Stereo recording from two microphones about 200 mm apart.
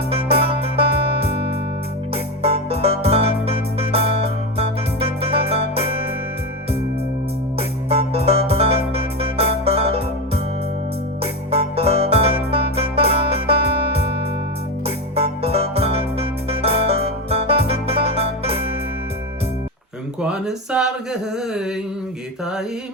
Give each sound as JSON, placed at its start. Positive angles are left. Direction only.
{"t": 0.1, "sound": "music", "side_deg": -30}
{"t": 7.9, "sound": "music", "side_deg": -30}
{"t": 20.2, "sound": "mantra", "side_deg": -5}